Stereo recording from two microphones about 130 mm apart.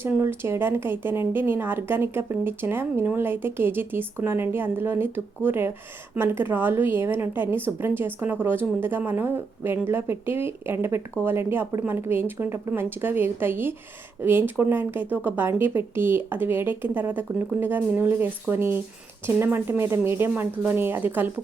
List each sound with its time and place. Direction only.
0.0 s speech: 20° right (ahead or behind)